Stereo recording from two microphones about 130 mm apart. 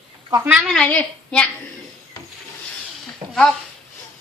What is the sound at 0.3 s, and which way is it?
Speech, 25° right (ahead or behind).